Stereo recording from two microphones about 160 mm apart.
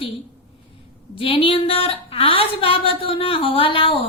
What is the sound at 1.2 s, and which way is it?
Speech, 35° left (ahead or behind).